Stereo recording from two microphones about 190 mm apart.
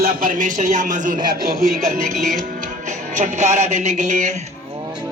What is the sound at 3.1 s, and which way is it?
Speech, 40° right (ahead or behind).